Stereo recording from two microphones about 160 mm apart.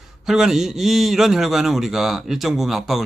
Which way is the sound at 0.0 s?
5° right (ahead or behind).